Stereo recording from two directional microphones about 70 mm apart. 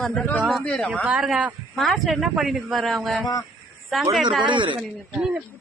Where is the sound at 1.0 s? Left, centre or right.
Centre.